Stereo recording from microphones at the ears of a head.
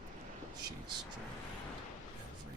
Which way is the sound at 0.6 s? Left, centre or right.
Right.